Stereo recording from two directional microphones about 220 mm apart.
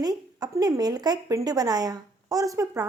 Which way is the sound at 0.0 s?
15° right (ahead or behind).